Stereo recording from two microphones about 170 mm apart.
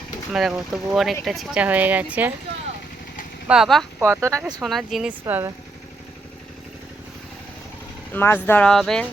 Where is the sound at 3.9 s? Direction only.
10° right (ahead or behind).